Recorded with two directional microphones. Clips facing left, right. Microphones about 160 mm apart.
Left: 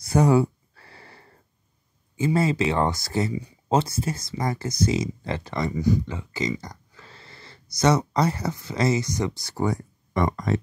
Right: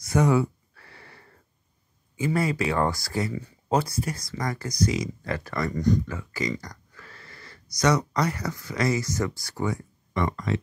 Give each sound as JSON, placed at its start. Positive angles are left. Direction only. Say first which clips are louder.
{"t": 0.0, "sound": "a sound", "louder": "left 3 dB", "side_deg": 30}
{"t": 2.1, "sound": "speech", "louder": "left 3 dB", "side_deg": 25}
{"t": 5.7, "sound": "speech", "louder": "even", "side_deg": 5}
{"t": 6.0, "sound": "speech", "louder": "left 2 dB", "side_deg": 20}
{"t": 9.6, "sound": "speech", "louder": "left 3 dB", "side_deg": 40}